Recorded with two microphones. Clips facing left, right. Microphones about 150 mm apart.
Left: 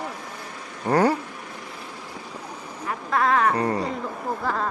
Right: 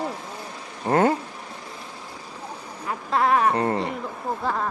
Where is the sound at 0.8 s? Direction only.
25° right (ahead or behind).